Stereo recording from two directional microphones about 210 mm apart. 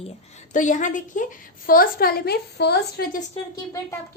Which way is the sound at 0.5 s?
35° left (ahead or behind).